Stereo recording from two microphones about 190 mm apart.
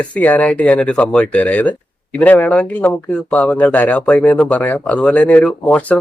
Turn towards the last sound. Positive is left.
turn(degrees=10)  # may be behind; listen again after turning